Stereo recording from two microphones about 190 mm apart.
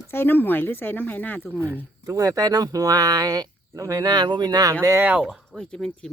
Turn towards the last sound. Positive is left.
turn(degrees=5)  # may be behind; listen again after turning